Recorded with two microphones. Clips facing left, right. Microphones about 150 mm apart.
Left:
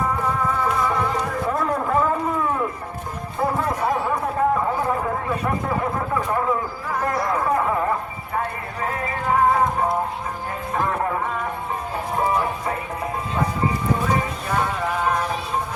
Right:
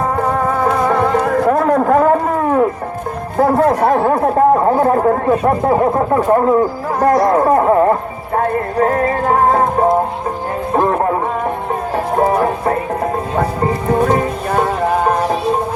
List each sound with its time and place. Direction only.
0.6 s music: 65° right (ahead or behind)
3.6 s speech: 70° right (ahead or behind); by 7.3 s 40° right (ahead or behind)
7.3 s speech: 55° right (ahead or behind)
8.4 s music: 50° right (ahead or behind)
10.8 s music: 45° right (ahead or behind)